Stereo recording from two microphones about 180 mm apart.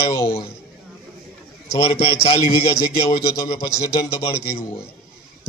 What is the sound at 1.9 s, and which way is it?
Speech, 30° left (ahead or behind).